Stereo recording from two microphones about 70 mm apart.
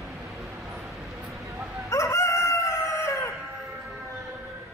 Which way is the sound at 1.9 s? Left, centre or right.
Left.